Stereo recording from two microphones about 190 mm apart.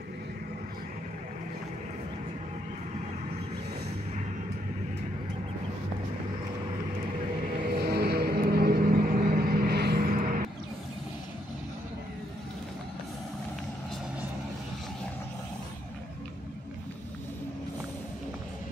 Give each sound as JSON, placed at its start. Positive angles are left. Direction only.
{"t": 7.8, "sound": "vehicle", "side_deg": -55}